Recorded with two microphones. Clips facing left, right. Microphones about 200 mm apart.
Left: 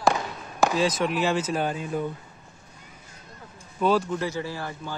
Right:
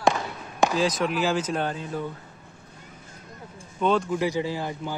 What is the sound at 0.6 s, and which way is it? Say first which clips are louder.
Speech: even; centre (ahead or behind).